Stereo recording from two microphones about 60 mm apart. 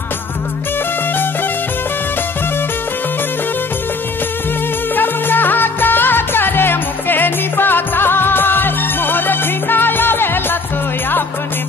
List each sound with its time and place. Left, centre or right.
4.9 s music: left